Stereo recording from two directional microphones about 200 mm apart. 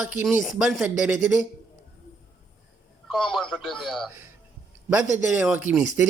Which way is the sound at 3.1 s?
Centre (ahead or behind).